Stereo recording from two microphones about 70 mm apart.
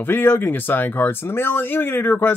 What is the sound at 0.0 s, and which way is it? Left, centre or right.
Speech, left.